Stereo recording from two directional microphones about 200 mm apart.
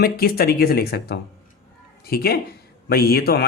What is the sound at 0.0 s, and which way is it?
Speech, 50° left (ahead or behind).